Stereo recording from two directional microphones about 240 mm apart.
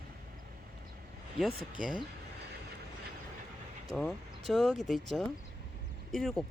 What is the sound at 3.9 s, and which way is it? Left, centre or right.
Speech, centre.